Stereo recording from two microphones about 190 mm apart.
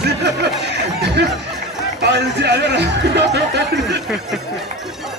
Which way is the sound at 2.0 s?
65° right (ahead or behind).